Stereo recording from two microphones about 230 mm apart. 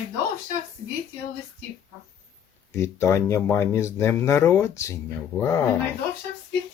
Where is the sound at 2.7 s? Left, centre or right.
Centre.